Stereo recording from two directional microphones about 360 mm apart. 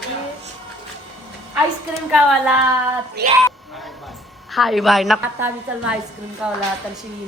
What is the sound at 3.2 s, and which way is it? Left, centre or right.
Speech, right.